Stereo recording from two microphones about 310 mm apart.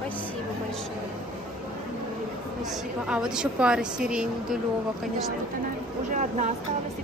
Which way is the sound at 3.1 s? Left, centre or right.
Centre.